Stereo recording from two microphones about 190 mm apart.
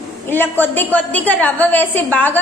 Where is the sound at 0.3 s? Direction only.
10° left (ahead or behind).